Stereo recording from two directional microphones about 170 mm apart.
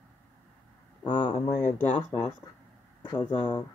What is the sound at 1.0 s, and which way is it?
Speech, 30° left (ahead or behind).